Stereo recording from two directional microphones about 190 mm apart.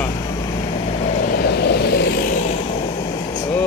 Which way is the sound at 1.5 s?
60° left (ahead or behind).